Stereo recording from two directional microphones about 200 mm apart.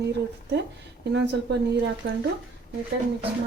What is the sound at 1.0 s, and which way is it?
Speech, 60° right (ahead or behind).